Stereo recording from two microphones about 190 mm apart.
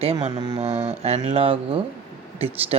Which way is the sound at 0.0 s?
30° right (ahead or behind).